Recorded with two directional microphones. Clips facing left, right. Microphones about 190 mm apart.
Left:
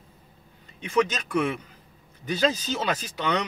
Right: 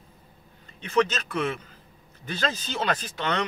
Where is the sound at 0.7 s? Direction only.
10° left (ahead or behind).